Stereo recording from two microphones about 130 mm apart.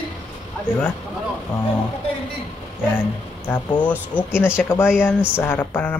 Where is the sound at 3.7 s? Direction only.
10° left (ahead or behind).